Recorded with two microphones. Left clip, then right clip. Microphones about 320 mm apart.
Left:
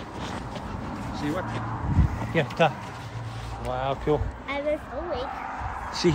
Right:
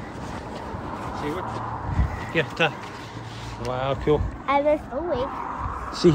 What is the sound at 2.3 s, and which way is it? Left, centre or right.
Speech, centre.